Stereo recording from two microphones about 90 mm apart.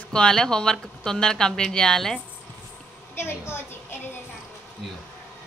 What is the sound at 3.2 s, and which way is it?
Speech, 25° left (ahead or behind).